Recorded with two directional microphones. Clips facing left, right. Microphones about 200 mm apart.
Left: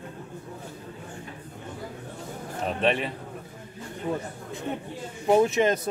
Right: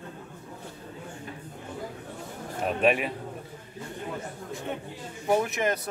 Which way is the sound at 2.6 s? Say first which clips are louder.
Right 1 dB; 5° right (ahead or behind).